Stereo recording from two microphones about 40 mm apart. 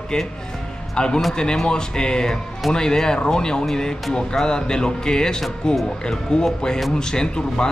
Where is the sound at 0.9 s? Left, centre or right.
Centre.